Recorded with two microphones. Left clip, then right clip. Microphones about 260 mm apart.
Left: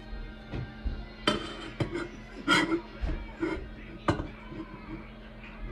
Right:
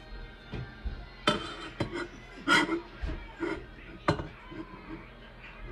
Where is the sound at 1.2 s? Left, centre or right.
Centre.